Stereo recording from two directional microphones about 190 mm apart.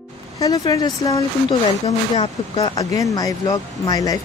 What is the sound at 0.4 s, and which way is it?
Speech, 20° left (ahead or behind).